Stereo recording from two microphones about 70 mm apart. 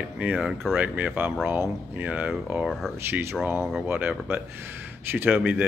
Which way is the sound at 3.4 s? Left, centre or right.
Right.